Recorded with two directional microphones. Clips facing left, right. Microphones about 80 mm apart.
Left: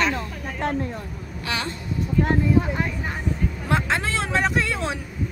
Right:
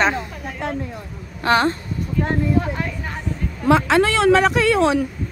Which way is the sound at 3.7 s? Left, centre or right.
Right.